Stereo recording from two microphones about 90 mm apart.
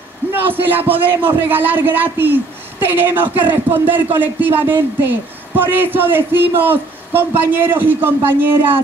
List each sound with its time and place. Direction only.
0.3 s a man's voice: 25° right (ahead or behind)